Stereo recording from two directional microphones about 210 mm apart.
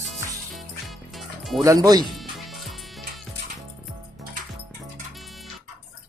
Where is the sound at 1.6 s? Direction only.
15° right (ahead or behind).